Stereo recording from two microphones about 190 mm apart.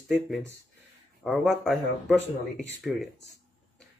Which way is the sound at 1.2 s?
Centre (ahead or behind).